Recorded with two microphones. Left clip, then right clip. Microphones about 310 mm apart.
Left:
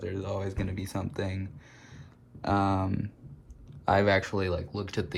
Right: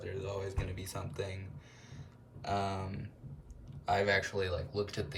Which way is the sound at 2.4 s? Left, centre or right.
Right.